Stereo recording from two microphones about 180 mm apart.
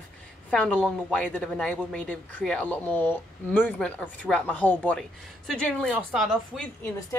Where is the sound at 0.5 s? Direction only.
5° left (ahead or behind).